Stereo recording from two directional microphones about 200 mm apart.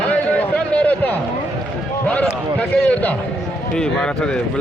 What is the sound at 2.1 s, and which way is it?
Speech, 5° left (ahead or behind).